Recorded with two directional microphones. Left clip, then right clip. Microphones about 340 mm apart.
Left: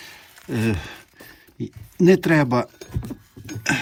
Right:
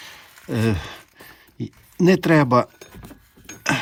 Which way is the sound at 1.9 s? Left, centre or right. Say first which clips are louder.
Even; right.